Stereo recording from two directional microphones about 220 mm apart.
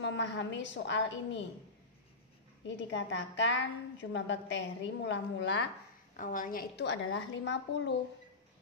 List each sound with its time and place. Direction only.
0.0 s a woman's voice: 55° left (ahead or behind)
2.6 s a woman's voice: 55° left (ahead or behind)
6.1 s a woman's voice: 35° left (ahead or behind); by 7.9 s 55° left (ahead or behind)